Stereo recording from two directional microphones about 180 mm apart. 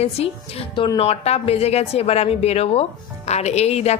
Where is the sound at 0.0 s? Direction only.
35° left (ahead or behind).